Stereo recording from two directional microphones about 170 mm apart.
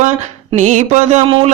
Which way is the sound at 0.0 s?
45° right (ahead or behind).